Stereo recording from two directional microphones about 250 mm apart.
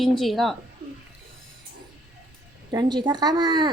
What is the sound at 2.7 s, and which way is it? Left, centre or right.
A woman's voice, centre.